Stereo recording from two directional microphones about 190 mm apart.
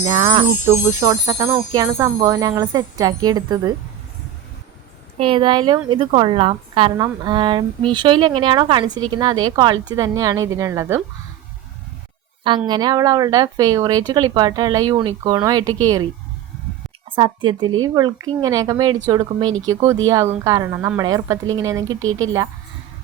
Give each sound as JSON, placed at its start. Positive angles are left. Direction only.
{"t": 0.1, "sound": "jingle bell", "side_deg": -25}
{"t": 0.6, "sound": "jingle bell", "side_deg": -15}
{"t": 5.1, "sound": "jingle bell", "side_deg": -30}
{"t": 12.5, "sound": "jingle bell", "side_deg": -25}
{"t": 17.1, "sound": "jingle bell", "side_deg": -25}
{"t": 19.6, "sound": "a woman's voice", "side_deg": -20}